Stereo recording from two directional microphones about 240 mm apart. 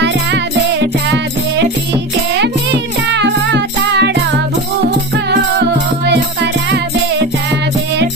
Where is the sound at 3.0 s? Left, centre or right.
Right.